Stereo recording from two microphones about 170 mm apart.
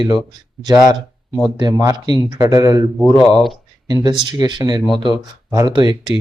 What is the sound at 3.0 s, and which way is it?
Speech, 5° left (ahead or behind).